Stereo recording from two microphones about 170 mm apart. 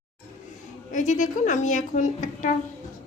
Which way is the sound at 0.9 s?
45° left (ahead or behind).